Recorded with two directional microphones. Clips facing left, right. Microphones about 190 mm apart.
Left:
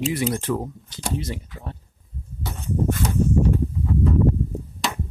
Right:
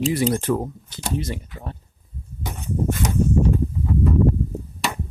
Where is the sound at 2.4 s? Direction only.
15° right (ahead or behind).